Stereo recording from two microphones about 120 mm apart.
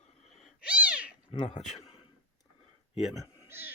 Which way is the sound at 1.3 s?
50° left (ahead or behind).